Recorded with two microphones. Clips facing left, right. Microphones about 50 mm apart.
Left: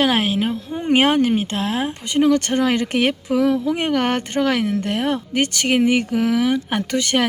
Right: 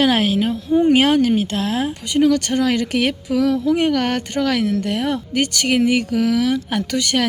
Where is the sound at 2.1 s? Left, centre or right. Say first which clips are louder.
Even; left.